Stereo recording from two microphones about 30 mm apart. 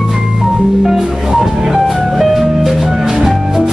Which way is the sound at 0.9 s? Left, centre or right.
Centre.